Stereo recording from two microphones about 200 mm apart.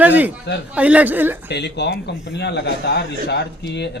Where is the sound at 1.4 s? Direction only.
60° left (ahead or behind).